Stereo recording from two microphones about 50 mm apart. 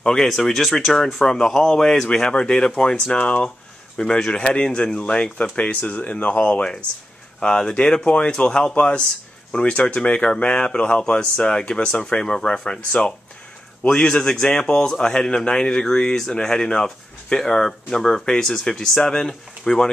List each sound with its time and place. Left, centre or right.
0.0 s speech: centre
2.0 s speech: centre
4.0 s speech: centre
12.0 s speech: centre